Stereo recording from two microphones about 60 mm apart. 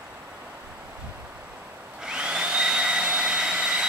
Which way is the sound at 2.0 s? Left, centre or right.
Centre.